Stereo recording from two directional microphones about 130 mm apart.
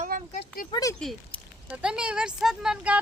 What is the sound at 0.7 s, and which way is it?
Speech, 25° left (ahead or behind).